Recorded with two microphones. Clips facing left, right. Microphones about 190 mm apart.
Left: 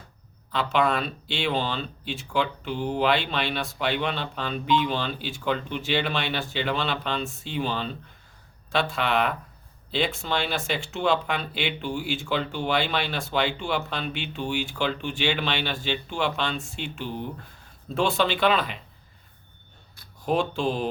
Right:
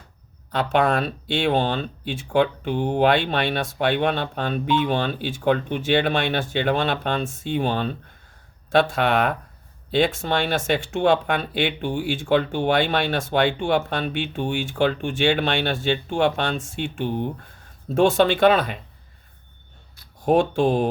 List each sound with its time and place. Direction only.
0.5 s speech: 50° right (ahead or behind)
20.2 s speech: 55° right (ahead or behind)